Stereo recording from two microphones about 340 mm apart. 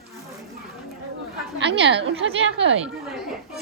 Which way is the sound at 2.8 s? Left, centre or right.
Centre.